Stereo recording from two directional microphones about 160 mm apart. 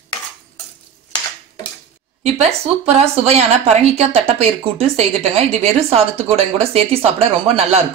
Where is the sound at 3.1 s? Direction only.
40° right (ahead or behind).